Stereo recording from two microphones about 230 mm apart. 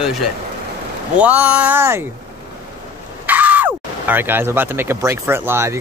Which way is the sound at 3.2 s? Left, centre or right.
Centre.